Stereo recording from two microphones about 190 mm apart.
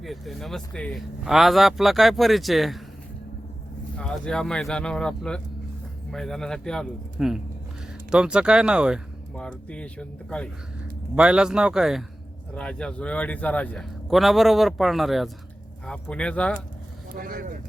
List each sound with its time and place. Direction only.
0.0 s speech: centre (ahead or behind)
3.9 s speech: 5° left (ahead or behind)
9.3 s speech: 5° left (ahead or behind)
17.2 s speech: 50° right (ahead or behind)